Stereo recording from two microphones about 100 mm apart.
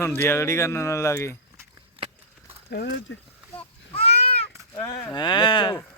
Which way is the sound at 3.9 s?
90° left.